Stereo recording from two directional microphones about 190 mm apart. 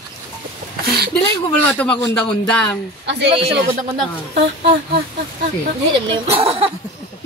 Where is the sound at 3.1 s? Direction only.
65° right (ahead or behind).